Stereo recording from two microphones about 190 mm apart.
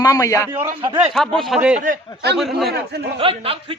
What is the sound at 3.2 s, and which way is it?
Speech, 30° right (ahead or behind).